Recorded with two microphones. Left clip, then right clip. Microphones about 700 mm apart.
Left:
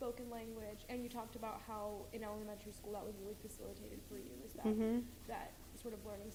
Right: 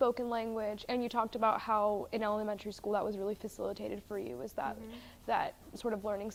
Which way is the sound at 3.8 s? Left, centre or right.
Right.